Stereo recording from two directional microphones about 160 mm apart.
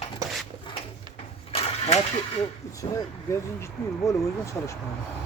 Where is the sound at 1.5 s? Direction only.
40° left (ahead or behind).